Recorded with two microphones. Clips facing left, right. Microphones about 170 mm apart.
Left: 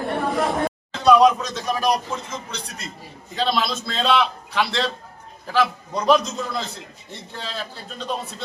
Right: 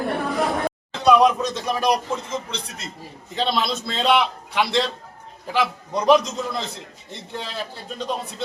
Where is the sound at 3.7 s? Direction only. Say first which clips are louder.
Right 1 dB; 20° right (ahead or behind).